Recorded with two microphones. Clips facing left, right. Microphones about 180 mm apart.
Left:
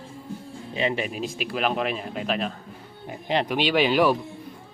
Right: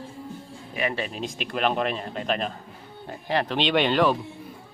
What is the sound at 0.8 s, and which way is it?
Speech, 25° left (ahead or behind).